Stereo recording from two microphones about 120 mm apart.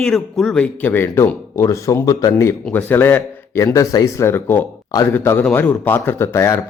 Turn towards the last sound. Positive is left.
turn(degrees=25)  # may be behind; listen again after turning